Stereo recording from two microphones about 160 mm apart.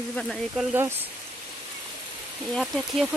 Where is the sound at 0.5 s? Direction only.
10° right (ahead or behind).